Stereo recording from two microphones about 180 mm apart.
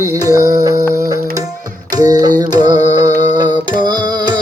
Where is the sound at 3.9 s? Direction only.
25° right (ahead or behind).